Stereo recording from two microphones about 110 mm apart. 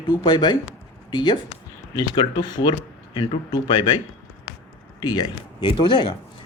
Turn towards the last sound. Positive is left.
turn(degrees=45)  # may be behind; listen again after turning